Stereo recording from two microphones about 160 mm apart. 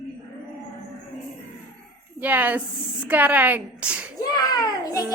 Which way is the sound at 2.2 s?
10° right (ahead or behind).